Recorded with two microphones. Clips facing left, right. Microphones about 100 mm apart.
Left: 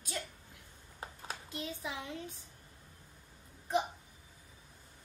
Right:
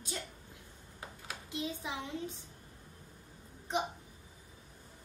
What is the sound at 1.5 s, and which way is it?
Speech, 20° right (ahead or behind).